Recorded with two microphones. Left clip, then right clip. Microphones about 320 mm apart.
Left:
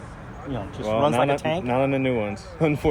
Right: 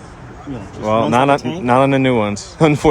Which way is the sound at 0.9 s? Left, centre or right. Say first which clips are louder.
Right 7 dB; right.